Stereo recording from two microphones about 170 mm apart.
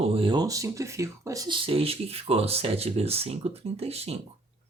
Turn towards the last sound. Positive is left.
turn(degrees=-35)  # may be behind; listen again after turning